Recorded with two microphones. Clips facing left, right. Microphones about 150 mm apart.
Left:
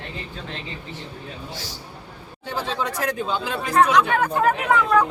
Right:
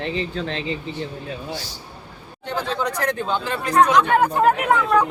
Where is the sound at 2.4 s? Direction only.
5° left (ahead or behind).